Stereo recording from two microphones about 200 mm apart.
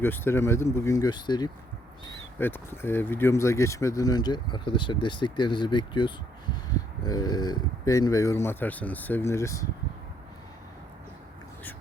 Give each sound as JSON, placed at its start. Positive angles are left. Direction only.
{"t": 0.0, "sound": "speech", "side_deg": 10}